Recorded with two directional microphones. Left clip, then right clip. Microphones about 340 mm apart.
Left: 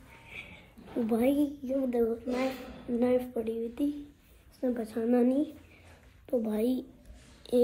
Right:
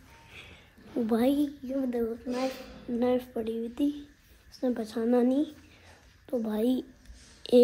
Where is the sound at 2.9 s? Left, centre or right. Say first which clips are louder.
Even; centre.